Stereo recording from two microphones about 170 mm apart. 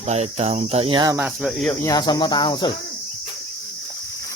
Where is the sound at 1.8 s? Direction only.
25° left (ahead or behind).